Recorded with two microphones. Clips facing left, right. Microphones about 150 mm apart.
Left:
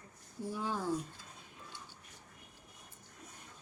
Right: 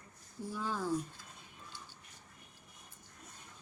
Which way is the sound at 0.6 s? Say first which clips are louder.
Even; 15° left (ahead or behind).